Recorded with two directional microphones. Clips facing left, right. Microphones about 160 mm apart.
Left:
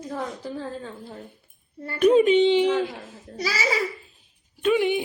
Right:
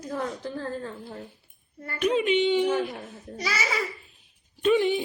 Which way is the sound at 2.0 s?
40° left (ahead or behind).